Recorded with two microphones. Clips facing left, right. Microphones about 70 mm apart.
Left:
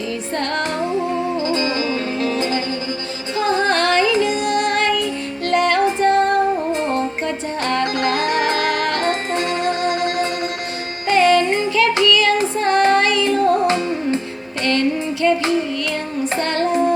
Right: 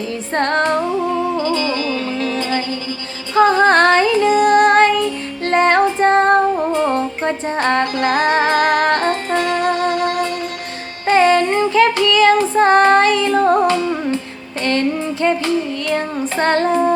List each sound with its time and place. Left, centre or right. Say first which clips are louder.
0.3 s music: right 7 dB; right
1.5 s music: right 1 dB; left
3.3 s music: right 7 dB; right
5.5 s female singing: right 3 dB; right
7.3 s music: right 4 dB; right
9.3 s music: right 3 dB; left
11.0 s music: right 2 dB; right
12.0 s female singing: right 3 dB; right
12.5 s child singing: right 4 dB; right
13.7 s music: right 2 dB; left
14.6 s music: right 1 dB; right
16.4 s music: right 6 dB; right